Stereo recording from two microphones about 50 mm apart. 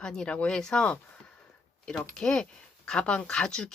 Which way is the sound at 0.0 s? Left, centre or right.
Centre.